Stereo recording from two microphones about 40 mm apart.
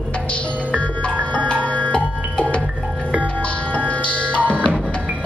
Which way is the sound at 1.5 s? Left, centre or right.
Left.